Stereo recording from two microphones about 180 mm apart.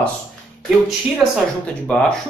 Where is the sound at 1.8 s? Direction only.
5° left (ahead or behind).